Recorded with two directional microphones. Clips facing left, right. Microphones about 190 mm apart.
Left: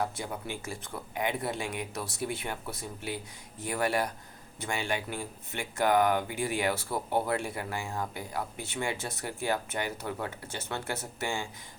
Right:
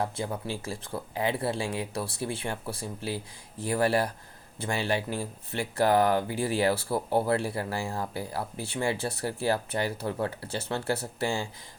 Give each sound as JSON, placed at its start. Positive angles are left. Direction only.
{"t": 0.0, "sound": "speech", "side_deg": -30}